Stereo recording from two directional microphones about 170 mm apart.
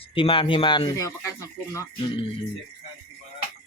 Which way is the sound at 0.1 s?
30° left (ahead or behind).